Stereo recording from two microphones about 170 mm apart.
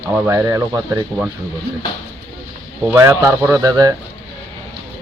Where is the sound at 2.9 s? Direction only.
15° right (ahead or behind).